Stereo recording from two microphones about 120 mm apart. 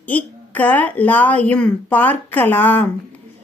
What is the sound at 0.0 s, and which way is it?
A woman's voice, 15° left (ahead or behind).